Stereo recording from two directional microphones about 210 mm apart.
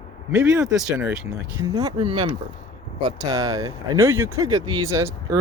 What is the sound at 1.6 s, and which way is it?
Speech, 20° right (ahead or behind).